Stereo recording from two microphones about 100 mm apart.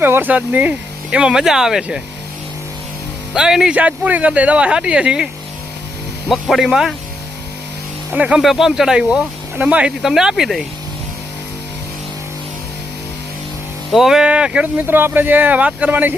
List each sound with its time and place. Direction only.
0.0 s speech: 20° right (ahead or behind); by 2.0 s 5° right (ahead or behind)
3.3 s speech: 5° right (ahead or behind)
8.1 s speech: 10° right (ahead or behind)
13.9 s speech: 5° right (ahead or behind)